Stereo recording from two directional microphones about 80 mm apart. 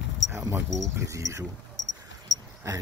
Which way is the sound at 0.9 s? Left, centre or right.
Right.